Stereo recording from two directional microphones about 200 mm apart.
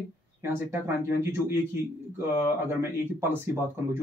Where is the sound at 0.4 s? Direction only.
10° right (ahead or behind).